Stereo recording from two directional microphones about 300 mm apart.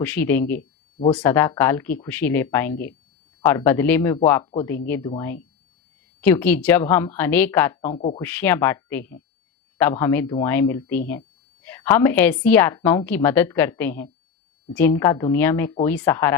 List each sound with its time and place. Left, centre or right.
0.0 s a woman's voice: centre
0.9 s speech: centre
1.2 s a woman's voice: centre
7.9 s speech: left
8.2 s a woman's voice: centre